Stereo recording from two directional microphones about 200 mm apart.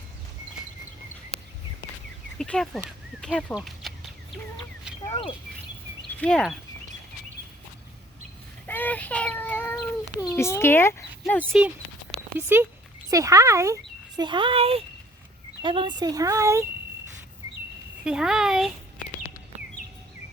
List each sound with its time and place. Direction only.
2.4 s speech: 5° left (ahead or behind)
5.2 s speech: 35° left (ahead or behind)
6.1 s speech: 5° left (ahead or behind)
8.6 s a child's voice: 10° left (ahead or behind)
11.5 s speech: 5° right (ahead or behind)
18.0 s speech: 5° right (ahead or behind)